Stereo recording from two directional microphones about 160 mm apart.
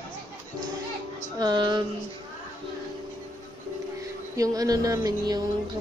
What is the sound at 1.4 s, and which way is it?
Speech, 30° right (ahead or behind).